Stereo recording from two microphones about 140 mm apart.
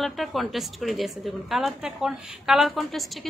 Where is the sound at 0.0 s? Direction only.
Centre (ahead or behind).